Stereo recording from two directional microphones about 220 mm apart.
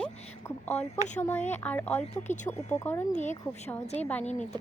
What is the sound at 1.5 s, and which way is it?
Speech, 10° left (ahead or behind).